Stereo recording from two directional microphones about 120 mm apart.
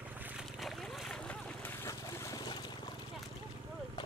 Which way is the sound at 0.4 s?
Centre (ahead or behind).